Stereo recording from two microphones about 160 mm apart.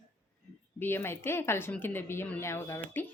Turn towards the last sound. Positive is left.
turn(degrees=10)  # may be behind; listen again after turning